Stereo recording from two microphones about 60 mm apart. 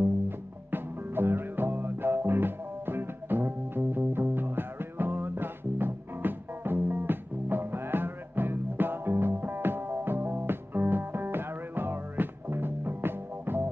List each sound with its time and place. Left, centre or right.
0.7 s music: right